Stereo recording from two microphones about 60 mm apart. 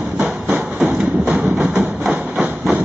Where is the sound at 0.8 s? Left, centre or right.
Right.